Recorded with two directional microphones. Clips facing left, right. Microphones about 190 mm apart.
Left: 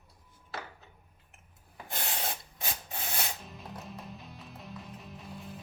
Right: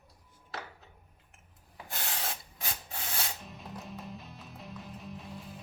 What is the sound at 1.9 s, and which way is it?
Rub, 20° left (ahead or behind).